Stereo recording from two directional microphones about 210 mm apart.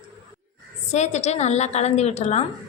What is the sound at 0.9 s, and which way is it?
A woman's voice, 35° left (ahead or behind).